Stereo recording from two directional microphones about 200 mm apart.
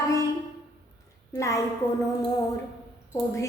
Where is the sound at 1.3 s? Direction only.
15° left (ahead or behind).